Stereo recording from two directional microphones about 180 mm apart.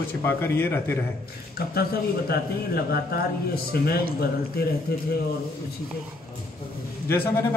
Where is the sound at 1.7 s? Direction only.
60° left (ahead or behind).